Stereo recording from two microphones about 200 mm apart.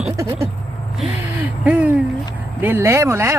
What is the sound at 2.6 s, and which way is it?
Speech, 10° right (ahead or behind).